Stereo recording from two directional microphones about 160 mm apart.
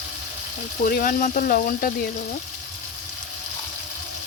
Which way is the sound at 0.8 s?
60° left (ahead or behind).